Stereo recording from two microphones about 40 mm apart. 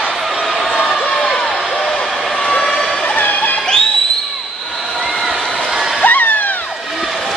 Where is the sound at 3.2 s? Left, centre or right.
Left.